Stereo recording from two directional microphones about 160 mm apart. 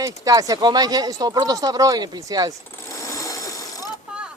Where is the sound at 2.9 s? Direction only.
20° left (ahead or behind).